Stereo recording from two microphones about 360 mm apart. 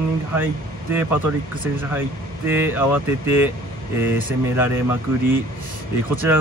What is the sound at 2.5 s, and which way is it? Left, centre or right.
Speech, centre.